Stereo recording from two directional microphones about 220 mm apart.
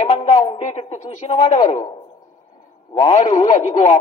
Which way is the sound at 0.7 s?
30° left (ahead or behind).